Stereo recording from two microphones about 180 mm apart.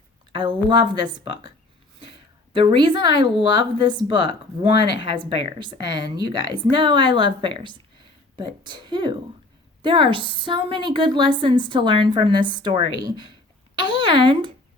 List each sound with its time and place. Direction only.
0.3 s a woman's voice: 25° right (ahead or behind)
2.5 s a woman's voice: 25° right (ahead or behind)
13.8 s a woman's voice: 25° right (ahead or behind)